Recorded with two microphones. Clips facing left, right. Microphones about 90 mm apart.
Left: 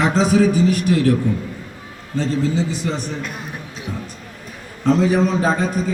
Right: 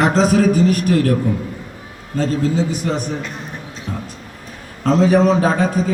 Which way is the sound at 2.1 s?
45° right (ahead or behind).